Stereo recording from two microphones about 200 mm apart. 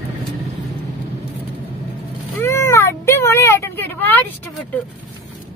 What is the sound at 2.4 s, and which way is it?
Meow, 15° left (ahead or behind).